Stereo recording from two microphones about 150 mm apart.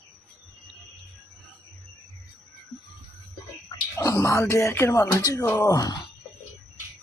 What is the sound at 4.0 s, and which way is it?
Speech, 20° left (ahead or behind).